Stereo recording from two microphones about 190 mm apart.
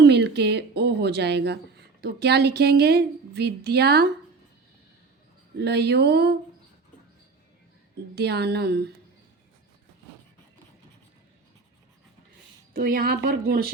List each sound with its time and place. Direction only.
0.0 s a woman's voice: 65° right (ahead or behind)
5.5 s a woman's voice: 60° right (ahead or behind)
8.1 s a woman's voice: 60° right (ahead or behind)
12.7 s speech: 50° right (ahead or behind)